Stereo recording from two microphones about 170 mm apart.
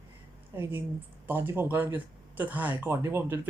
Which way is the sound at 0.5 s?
15° right (ahead or behind).